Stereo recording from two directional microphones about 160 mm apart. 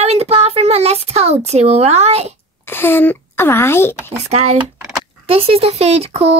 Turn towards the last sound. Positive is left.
turn(degrees=-40)  # may be behind; listen again after turning